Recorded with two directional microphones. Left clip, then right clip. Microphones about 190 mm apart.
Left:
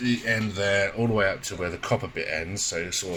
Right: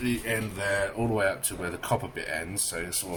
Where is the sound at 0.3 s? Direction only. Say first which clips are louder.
Left 5 dB; 20° left (ahead or behind).